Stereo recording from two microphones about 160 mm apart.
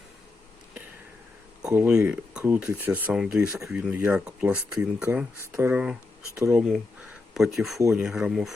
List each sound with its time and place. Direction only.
1.6 s speech: 10° right (ahead or behind)
7.8 s speech: 20° right (ahead or behind)
8.0 s speech: 5° right (ahead or behind)